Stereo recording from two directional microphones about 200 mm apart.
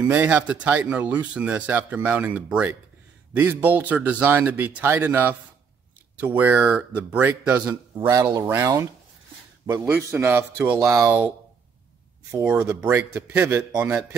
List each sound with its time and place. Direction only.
0.0 s speech: 10° right (ahead or behind)
8.0 s speech: 20° right (ahead or behind)
12.3 s speech: 10° right (ahead or behind)